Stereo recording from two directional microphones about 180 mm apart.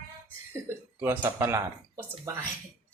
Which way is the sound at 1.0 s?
15° right (ahead or behind).